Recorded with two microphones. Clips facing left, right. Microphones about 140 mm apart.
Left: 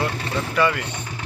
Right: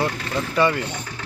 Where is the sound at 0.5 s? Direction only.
30° right (ahead or behind).